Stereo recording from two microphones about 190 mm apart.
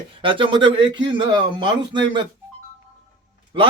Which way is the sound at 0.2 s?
25° right (ahead or behind).